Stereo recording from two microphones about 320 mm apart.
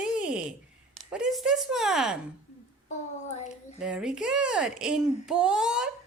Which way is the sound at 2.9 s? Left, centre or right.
Left.